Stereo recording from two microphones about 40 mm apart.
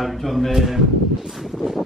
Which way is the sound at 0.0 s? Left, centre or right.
Centre.